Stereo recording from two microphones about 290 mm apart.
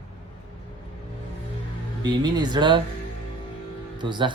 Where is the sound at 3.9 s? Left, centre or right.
Centre.